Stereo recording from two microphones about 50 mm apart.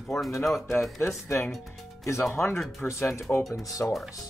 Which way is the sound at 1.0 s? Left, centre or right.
Left.